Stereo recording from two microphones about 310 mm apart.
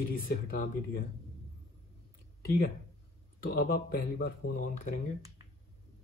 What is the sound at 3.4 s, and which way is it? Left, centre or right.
Speech, left.